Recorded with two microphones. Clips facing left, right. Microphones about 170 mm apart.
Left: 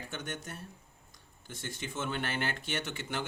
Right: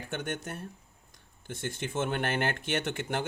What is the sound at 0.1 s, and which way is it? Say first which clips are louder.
Speech: right 8 dB; 55° right (ahead or behind).